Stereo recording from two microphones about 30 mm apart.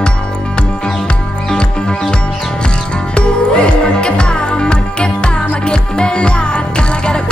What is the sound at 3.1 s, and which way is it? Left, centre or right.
Music, left.